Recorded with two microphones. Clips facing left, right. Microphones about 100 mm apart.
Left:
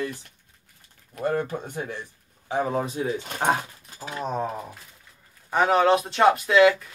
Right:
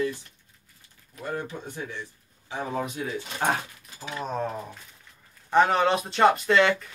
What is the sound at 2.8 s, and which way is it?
Speech, 30° left (ahead or behind).